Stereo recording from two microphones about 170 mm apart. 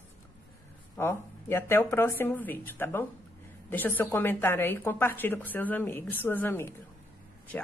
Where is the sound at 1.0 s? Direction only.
15° left (ahead or behind).